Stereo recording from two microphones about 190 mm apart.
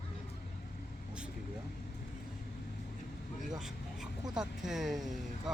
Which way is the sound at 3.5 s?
5° right (ahead or behind).